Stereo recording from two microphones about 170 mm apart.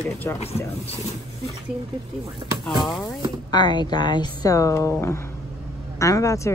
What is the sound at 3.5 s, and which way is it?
Speech, 25° left (ahead or behind).